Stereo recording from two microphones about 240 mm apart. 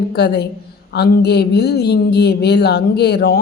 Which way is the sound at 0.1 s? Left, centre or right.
Left.